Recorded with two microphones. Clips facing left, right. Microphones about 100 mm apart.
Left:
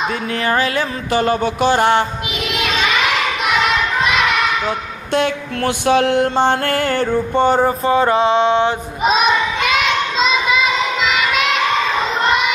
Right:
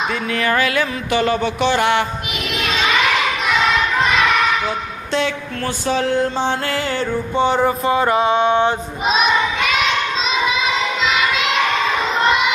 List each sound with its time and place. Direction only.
0.3 s music: 35° left (ahead or behind)
5.1 s mantra: 60° left (ahead or behind); by 8.6 s 25° left (ahead or behind)